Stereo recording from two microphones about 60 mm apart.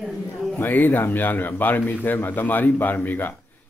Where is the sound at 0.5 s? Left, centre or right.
Left.